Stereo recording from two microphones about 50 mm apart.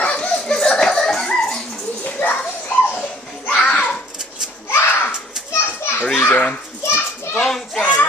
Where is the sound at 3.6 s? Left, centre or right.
Centre.